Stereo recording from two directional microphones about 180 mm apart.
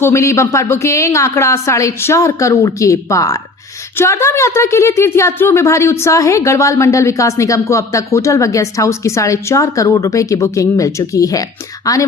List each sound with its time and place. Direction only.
0.0 s a woman's voice: 15° left (ahead or behind)